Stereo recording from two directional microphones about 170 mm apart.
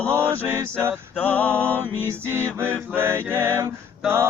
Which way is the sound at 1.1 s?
10° left (ahead or behind).